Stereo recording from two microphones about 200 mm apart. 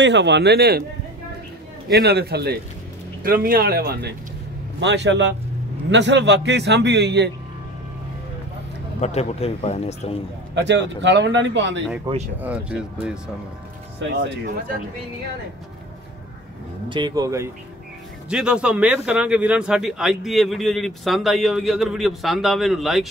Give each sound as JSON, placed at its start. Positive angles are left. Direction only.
{"t": 0.0, "sound": "a man's voice", "side_deg": -60}
{"t": 1.9, "sound": "speech", "side_deg": -55}
{"t": 4.7, "sound": "a man's voice", "side_deg": -60}
{"t": 9.0, "sound": "speech", "side_deg": 30}
{"t": 10.5, "sound": "a man's voice", "side_deg": -65}
{"t": 12.4, "sound": "a man's voice", "side_deg": -5}
{"t": 14.0, "sound": "a man's voice", "side_deg": -60}
{"t": 16.9, "sound": "speech", "side_deg": -20}
{"t": 18.3, "sound": "a man's voice", "side_deg": -5}